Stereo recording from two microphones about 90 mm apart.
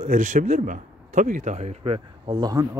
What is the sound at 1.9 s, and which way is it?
Speech, 55° right (ahead or behind).